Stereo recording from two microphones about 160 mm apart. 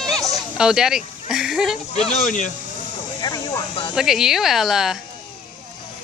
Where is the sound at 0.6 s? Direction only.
5° right (ahead or behind).